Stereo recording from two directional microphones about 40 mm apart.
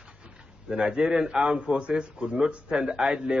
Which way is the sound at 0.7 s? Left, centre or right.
Right.